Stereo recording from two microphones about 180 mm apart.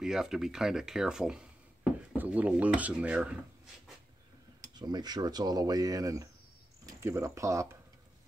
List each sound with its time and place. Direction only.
0.0 s speech: 5° right (ahead or behind)
4.7 s speech: 25° right (ahead or behind)